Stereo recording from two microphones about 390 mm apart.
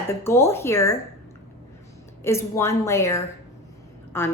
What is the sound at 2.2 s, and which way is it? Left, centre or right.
A woman's voice, centre.